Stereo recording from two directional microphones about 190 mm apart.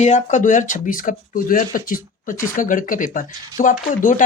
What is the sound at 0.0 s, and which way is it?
Speech, 40° left (ahead or behind).